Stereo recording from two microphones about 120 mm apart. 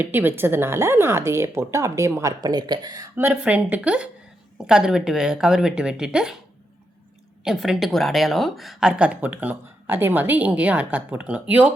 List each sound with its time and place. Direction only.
0.0 s speech: 15° right (ahead or behind); by 3.1 s 35° right (ahead or behind)
3.2 s a woman's voice: 15° right (ahead or behind)
7.4 s a woman's voice: centre (ahead or behind)